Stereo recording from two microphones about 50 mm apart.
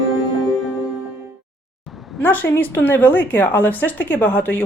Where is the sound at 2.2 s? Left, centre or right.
Left.